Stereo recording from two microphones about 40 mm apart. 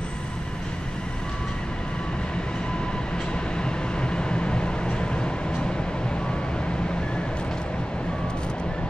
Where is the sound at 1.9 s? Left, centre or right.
Left.